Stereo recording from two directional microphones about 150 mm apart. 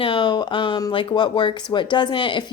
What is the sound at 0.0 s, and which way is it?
Speech, 35° left (ahead or behind).